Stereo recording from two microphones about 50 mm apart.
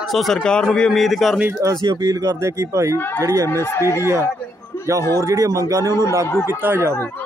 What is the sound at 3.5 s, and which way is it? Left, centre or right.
Speech, left.